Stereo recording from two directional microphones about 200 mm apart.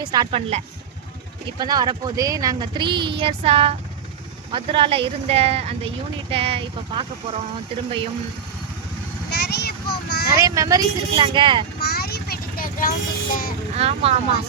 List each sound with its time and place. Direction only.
0.0 s speech: 20° right (ahead or behind)
9.3 s a sound: 55° left (ahead or behind)
10.4 s speech: 15° right (ahead or behind)
11.8 s vehicle: 50° left (ahead or behind)
13.7 s speech: 30° right (ahead or behind)